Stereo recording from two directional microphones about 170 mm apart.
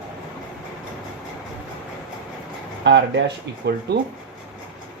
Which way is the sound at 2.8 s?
90° right.